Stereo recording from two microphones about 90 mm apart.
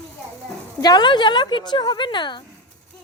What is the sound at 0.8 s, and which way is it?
Speech, 55° left (ahead or behind).